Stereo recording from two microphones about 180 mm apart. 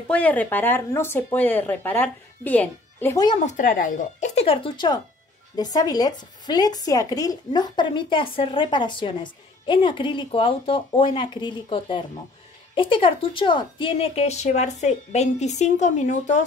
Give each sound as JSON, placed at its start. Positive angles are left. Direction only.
{"t": 0.1, "sound": "speech", "side_deg": 10}
{"t": 3.4, "sound": "speech", "side_deg": 50}